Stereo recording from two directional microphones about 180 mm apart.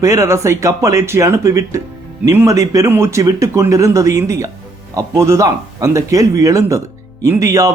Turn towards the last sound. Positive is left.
turn(degrees=-15)  # may be behind; listen again after turning